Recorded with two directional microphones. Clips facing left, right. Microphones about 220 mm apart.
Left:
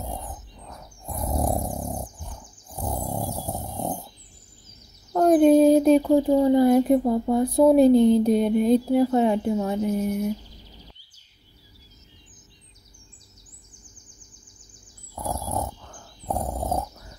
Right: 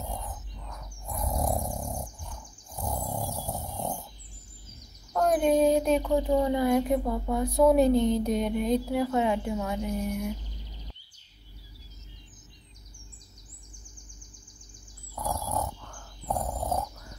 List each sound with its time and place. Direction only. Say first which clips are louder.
0.0 s bird: left 3 dB; 30° left (ahead or behind)
0.6 s a sound: left 2 dB; 30° left (ahead or behind)
3.3 s vehicle: left 4 dB; 30° left (ahead or behind)
3.6 s dog: left 4 dB; 35° left (ahead or behind)
5.1 s child singing: left 8 dB; 35° left (ahead or behind)
5.6 s speech: left 7 dB; 35° left (ahead or behind)
15.1 s dog: left 2 dB; 25° left (ahead or behind)